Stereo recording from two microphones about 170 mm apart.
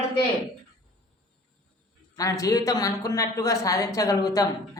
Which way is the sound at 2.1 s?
20° left (ahead or behind).